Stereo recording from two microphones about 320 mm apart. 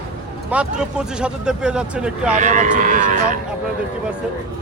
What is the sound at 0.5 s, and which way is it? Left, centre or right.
Speech, centre.